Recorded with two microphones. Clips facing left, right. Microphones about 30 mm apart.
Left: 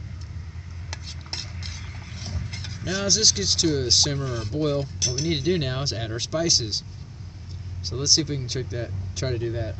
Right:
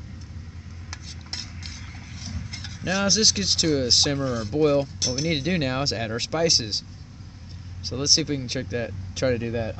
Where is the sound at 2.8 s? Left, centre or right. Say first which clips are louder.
Right 1 dB; right.